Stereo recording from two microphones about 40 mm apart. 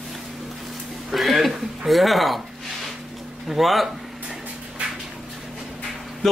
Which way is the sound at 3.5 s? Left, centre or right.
Centre.